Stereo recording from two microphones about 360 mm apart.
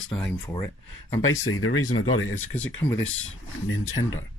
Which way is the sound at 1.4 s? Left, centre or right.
Left.